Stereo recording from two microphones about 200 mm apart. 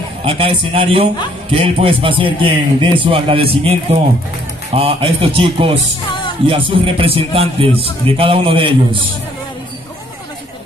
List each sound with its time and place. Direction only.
0.2 s a man's voice: 30° right (ahead or behind)
4.7 s a man's voice: 30° right (ahead or behind)